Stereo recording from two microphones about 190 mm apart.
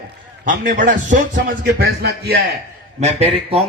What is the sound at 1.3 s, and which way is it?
Speech, 60° right (ahead or behind).